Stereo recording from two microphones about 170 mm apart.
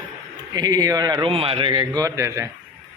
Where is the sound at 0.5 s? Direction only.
25° right (ahead or behind).